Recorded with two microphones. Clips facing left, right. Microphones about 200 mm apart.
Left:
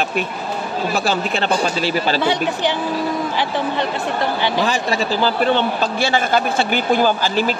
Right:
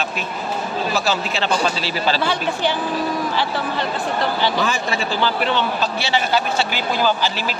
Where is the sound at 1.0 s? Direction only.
55° left (ahead or behind).